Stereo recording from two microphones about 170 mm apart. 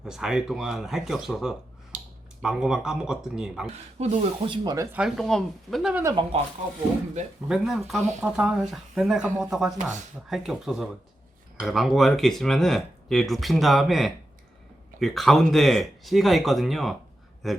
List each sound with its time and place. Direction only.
0.0 s speech: 5° right (ahead or behind)
3.9 s speech: 40° right (ahead or behind); by 4.9 s 25° right (ahead or behind)
4.9 s speech: 5° right (ahead or behind)
5.9 s speech: 15° right (ahead or behind)
7.4 s speech: 5° right (ahead or behind)